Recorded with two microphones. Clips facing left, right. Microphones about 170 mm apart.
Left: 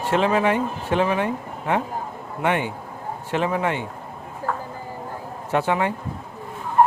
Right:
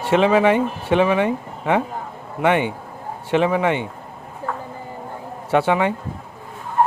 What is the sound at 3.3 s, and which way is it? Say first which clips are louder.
Speech: right 5 dB; 85° right.